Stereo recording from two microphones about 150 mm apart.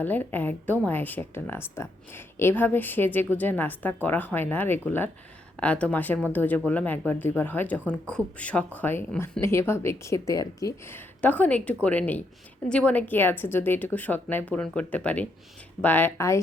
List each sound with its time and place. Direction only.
0.0 s speech: 10° left (ahead or behind)